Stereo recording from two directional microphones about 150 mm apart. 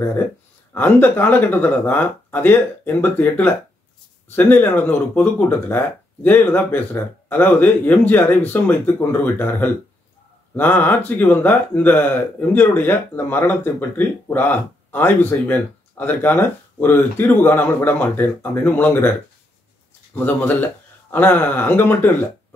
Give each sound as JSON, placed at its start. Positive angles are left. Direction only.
{"t": 0.7, "sound": "speech", "side_deg": 10}
{"t": 20.2, "sound": "speech", "side_deg": 10}